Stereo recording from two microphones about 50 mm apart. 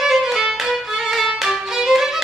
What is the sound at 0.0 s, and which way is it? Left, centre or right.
Violin, centre.